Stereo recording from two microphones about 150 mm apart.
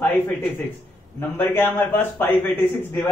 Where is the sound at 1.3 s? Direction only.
15° left (ahead or behind).